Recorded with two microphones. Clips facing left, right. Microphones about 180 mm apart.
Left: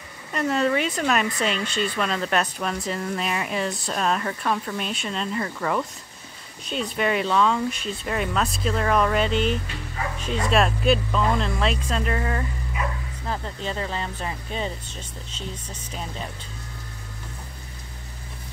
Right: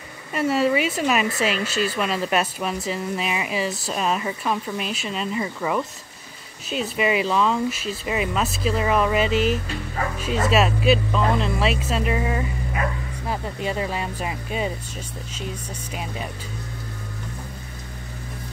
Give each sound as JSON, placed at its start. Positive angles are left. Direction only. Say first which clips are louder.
{"t": 0.3, "sound": "speech", "louder": "right 2 dB", "side_deg": -5}